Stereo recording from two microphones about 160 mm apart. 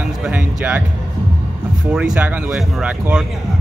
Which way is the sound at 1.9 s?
5° right (ahead or behind).